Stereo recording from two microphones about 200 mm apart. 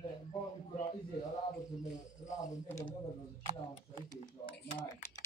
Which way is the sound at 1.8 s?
35° left (ahead or behind).